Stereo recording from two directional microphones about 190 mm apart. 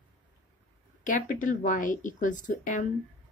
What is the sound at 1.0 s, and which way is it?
A woman's voice, 45° left (ahead or behind).